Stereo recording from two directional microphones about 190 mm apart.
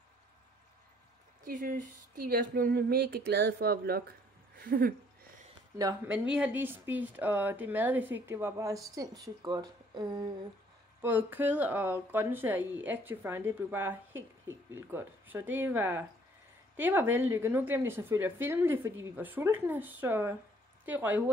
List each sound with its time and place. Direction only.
1.4 s speech: 45° right (ahead or behind)
5.8 s a woman's voice: 15° right (ahead or behind)
11.0 s speech: 10° right (ahead or behind)